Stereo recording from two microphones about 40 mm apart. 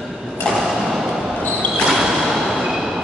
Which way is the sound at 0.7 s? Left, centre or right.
Centre.